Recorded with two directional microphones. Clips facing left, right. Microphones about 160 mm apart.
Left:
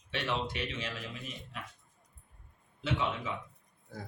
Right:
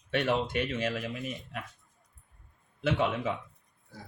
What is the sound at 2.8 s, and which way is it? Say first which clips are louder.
Speech: right 5 dB; 60° right (ahead or behind).